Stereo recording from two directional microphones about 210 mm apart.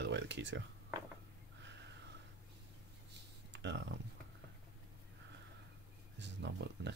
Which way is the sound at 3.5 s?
60° right (ahead or behind).